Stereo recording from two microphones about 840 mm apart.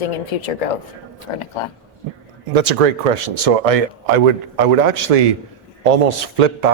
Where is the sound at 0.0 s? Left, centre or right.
Left.